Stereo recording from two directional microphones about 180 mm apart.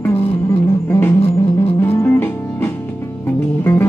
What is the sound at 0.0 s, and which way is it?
Music, 15° left (ahead or behind).